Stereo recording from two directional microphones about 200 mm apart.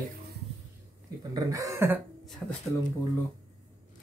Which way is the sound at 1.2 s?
15° right (ahead or behind).